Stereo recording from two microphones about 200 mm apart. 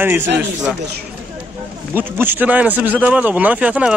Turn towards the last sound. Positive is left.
turn(degrees=-5)  # may be behind; listen again after turning